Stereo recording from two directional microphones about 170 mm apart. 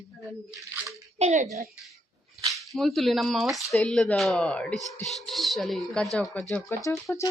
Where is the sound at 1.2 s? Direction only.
40° right (ahead or behind).